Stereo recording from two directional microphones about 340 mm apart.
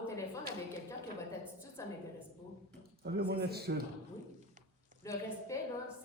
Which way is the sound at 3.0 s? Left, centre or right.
Right.